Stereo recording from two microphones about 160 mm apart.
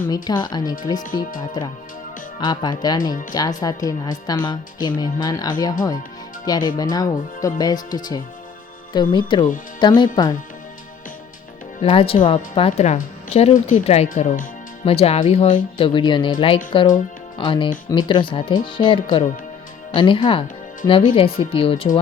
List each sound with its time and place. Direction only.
0.1 s a woman's voice: 25° left (ahead or behind)
11.8 s speech: 35° left (ahead or behind)
14.1 s speech: 55° left (ahead or behind)
14.8 s speech: 40° left (ahead or behind)